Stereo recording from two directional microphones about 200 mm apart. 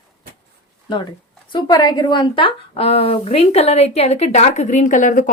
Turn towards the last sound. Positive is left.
turn(degrees=40)  # may be behind; listen again after turning